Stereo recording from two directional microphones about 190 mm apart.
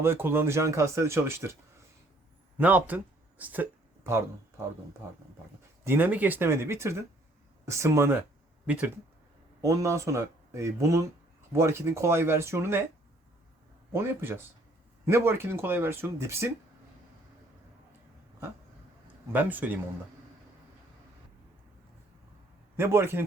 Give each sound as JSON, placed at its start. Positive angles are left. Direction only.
{"t": 0.0, "sound": "speech", "side_deg": -10}
{"t": 2.6, "sound": "speech", "side_deg": -10}
{"t": 5.8, "sound": "speech", "side_deg": -10}
{"t": 13.9, "sound": "speech", "side_deg": -10}
{"t": 19.3, "sound": "speech", "side_deg": -10}
{"t": 22.8, "sound": "speech", "side_deg": -15}